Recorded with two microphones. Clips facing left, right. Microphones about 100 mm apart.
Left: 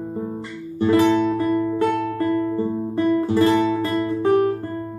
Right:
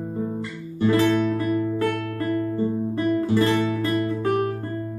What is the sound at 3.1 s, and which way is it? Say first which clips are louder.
Music: left 3 dB; 25° left (ahead or behind).